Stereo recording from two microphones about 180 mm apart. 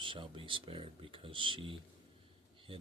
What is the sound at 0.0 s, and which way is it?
Speech, 30° right (ahead or behind).